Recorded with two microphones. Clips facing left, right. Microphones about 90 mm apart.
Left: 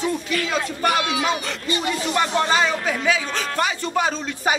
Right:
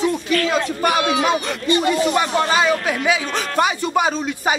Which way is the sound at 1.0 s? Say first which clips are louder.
Right 5 dB; 45° right (ahead or behind).